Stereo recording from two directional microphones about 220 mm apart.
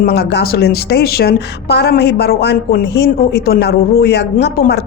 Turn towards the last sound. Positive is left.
turn(degrees=45)  # may be behind; listen again after turning